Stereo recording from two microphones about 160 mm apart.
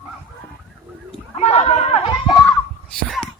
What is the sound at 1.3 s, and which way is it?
Speech, 40° left (ahead or behind).